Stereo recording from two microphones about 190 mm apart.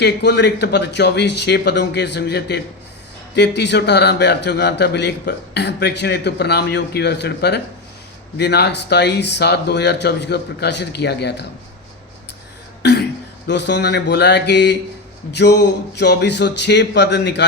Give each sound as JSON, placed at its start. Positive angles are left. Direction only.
{"t": 0.0, "sound": "a man's voice", "side_deg": 60}
{"t": 12.8, "sound": "throat clearing", "side_deg": 60}
{"t": 13.5, "sound": "a man's voice", "side_deg": 65}